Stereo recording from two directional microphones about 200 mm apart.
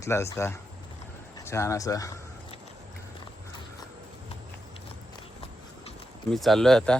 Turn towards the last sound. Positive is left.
turn(degrees=0)  # may be behind; listen again after turning